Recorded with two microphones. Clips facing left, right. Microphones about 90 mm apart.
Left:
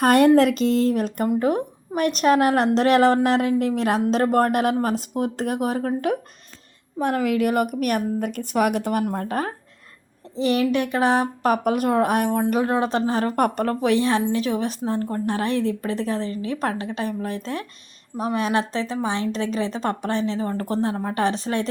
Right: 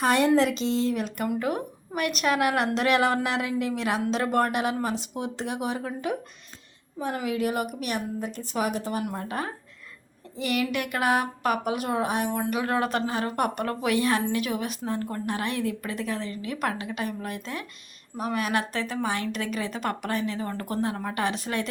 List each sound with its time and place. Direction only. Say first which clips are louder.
0.0 s a woman's voice: left 6 dB; 50° left (ahead or behind)
7.0 s a woman's voice: left 7 dB; 65° left (ahead or behind)
9.0 s speech: left 6 dB; 45° left (ahead or behind)
10.3 s a woman's voice: left 7 dB; 30° left (ahead or behind)
12.6 s a woman's voice: left 4 dB; 25° left (ahead or behind)
13.1 s a woman's voice: left 6 dB; 45° left (ahead or behind)